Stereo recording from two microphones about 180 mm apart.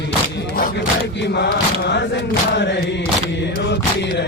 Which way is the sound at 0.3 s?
55° left (ahead or behind).